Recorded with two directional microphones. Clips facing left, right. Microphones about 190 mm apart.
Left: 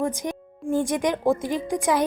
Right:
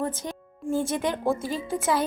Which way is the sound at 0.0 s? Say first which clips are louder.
Left 4 dB; 15° left (ahead or behind).